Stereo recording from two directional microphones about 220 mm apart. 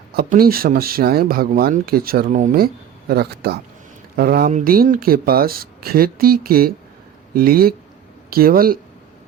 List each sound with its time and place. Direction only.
0.1 s speech: 45° right (ahead or behind)